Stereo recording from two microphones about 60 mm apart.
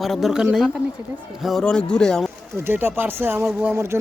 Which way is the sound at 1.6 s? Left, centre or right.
Centre.